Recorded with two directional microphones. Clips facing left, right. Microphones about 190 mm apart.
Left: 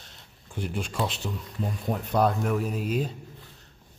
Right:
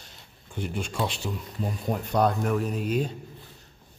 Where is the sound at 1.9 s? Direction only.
Centre (ahead or behind).